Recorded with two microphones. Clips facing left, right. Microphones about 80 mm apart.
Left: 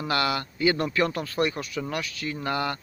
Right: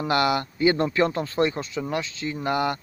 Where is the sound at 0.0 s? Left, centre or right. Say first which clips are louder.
Right 4 dB; right.